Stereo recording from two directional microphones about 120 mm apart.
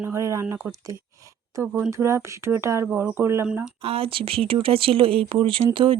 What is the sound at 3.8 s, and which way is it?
Speech, 50° right (ahead or behind).